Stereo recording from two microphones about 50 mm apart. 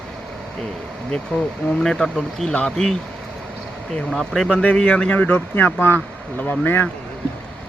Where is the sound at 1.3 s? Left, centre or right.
Centre.